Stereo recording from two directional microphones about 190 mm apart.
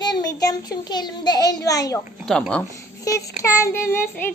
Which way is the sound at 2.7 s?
15° left (ahead or behind).